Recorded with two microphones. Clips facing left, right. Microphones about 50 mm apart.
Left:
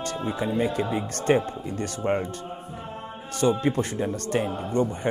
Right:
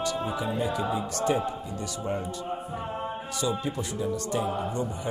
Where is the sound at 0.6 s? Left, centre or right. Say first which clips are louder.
Left 2 dB; left.